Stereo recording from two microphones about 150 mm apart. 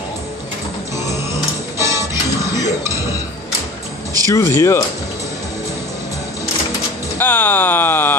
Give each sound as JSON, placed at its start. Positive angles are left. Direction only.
{"t": 1.8, "sound": "music", "side_deg": -20}
{"t": 4.3, "sound": "speech", "side_deg": 20}
{"t": 7.2, "sound": "a sound", "side_deg": 15}